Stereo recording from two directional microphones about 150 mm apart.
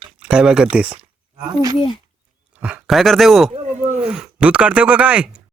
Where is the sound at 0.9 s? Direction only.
35° right (ahead or behind).